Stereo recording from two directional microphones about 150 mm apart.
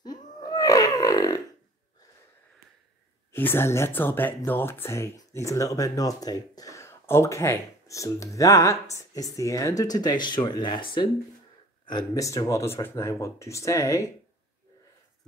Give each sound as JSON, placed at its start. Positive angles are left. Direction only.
{"t": 0.0, "sound": "grunt", "side_deg": 25}
{"t": 3.3, "sound": "speech", "side_deg": 15}